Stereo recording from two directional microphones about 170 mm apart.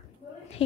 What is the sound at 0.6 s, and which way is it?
Speech, 35° left (ahead or behind).